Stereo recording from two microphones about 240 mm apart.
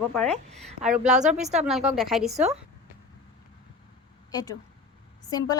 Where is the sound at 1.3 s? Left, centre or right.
Right.